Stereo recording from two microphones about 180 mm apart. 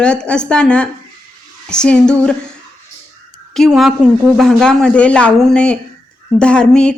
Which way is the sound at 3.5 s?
Centre (ahead or behind).